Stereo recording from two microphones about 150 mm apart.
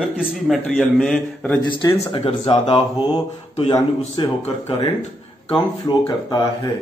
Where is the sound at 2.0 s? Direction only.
40° left (ahead or behind).